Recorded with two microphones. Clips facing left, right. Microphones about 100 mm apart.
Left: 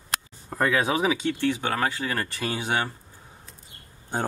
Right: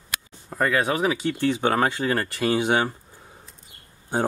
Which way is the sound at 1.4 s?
20° right (ahead or behind).